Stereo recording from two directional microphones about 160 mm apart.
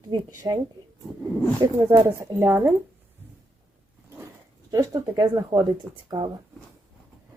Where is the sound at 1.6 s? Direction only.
15° right (ahead or behind).